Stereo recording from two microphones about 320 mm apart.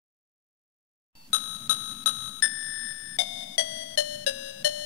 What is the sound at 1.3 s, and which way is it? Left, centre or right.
Music, left.